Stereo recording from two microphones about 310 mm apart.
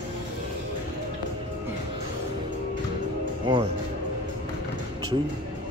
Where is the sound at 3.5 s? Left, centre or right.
Centre.